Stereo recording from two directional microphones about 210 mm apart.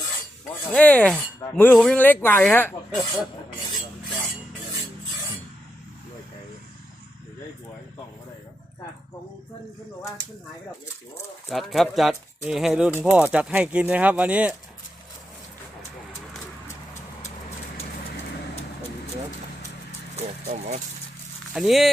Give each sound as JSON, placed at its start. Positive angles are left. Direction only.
{"t": 0.7, "sound": "speech", "side_deg": 5}
{"t": 11.4, "sound": "speech", "side_deg": 0}
{"t": 20.5, "sound": "speech", "side_deg": -35}
{"t": 21.5, "sound": "speech", "side_deg": 0}